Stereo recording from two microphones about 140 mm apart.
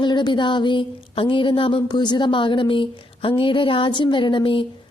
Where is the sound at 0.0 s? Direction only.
35° left (ahead or behind).